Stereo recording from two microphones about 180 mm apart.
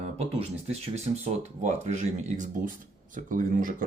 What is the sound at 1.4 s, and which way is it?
Speech, 40° right (ahead or behind).